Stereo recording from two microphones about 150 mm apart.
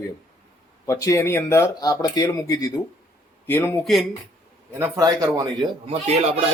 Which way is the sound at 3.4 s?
15° left (ahead or behind).